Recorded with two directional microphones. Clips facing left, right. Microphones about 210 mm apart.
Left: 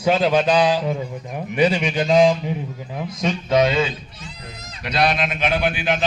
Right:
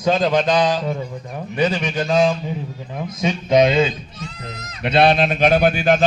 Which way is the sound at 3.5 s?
20° right (ahead or behind).